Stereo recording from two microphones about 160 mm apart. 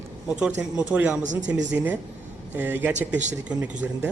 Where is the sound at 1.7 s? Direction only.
10° right (ahead or behind).